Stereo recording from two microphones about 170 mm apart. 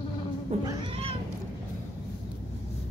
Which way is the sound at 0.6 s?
30° right (ahead or behind).